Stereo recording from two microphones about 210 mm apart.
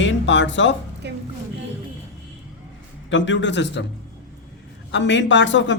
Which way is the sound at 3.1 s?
60° left (ahead or behind).